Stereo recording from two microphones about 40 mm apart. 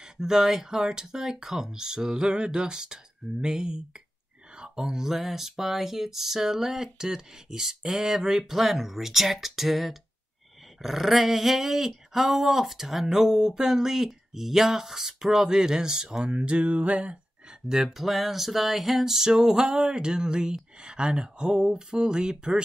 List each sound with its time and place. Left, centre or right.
0.0 s speech: centre
16.7 s a sound: right
17.6 s speech: centre
17.9 s speech: centre